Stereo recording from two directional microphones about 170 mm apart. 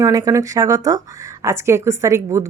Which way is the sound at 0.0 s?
20° right (ahead or behind).